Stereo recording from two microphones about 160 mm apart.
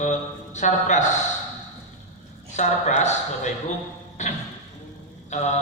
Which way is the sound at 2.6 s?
50° left (ahead or behind).